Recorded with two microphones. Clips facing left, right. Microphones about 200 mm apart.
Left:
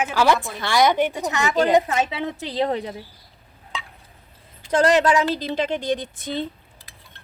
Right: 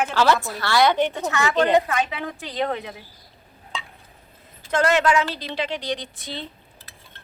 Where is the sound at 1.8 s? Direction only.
25° left (ahead or behind).